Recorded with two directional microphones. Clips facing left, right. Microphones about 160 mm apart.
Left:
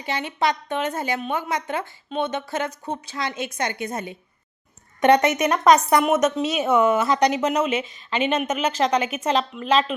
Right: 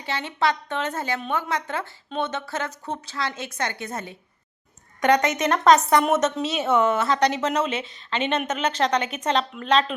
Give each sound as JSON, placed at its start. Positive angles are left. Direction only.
{"t": 0.0, "sound": "a woman's voice", "side_deg": 15}
{"t": 4.9, "sound": "a woman's voice", "side_deg": 25}
{"t": 5.4, "sound": "a woman's voice", "side_deg": 15}